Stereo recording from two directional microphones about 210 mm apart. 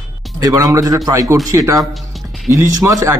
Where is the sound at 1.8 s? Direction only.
Centre (ahead or behind).